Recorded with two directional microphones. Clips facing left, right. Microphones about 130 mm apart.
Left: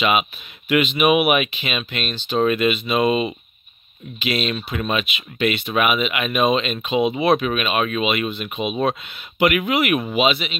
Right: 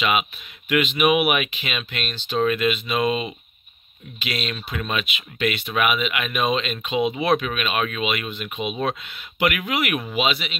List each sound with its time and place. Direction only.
0.7 s speech: 20° left (ahead or behind)
4.6 s speech: 25° left (ahead or behind)